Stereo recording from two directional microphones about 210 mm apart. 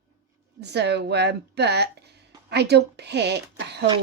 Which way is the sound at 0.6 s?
55° right (ahead or behind).